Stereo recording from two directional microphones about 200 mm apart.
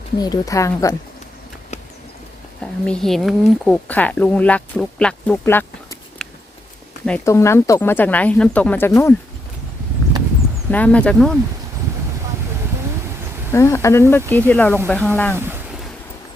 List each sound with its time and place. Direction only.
0.2 s speech: 20° left (ahead or behind)
2.6 s speech: 5° left (ahead or behind)
7.3 s speech: 15° left (ahead or behind)
10.7 s speech: 5° left (ahead or behind)
13.5 s speech: 15° left (ahead or behind)